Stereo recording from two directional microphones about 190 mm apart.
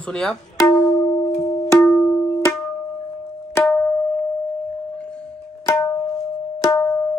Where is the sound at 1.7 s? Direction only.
5° left (ahead or behind).